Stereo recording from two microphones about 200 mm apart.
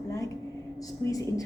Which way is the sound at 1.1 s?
15° left (ahead or behind).